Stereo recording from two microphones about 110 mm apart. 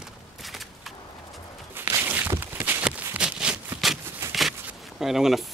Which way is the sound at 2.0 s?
20° right (ahead or behind).